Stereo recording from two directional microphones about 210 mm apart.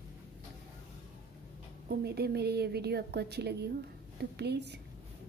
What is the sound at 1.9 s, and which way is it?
A woman's voice, 50° right (ahead or behind).